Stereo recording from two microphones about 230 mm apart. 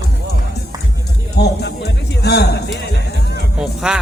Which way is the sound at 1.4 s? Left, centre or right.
Left.